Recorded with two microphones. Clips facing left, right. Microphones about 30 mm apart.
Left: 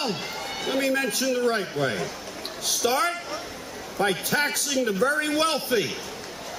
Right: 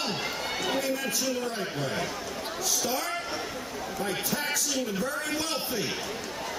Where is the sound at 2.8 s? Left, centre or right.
Left.